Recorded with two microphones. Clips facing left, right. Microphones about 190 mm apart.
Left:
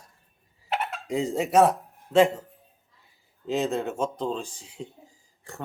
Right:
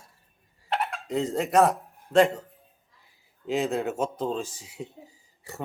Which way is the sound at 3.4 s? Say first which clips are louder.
Even; centre (ahead or behind).